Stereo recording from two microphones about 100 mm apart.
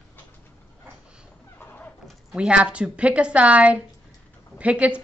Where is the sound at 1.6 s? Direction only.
20° left (ahead or behind).